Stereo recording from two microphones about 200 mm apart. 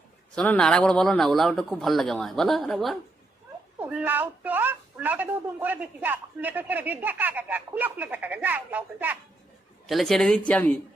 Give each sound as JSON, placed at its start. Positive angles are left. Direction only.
{"t": 0.3, "sound": "speech", "side_deg": 5}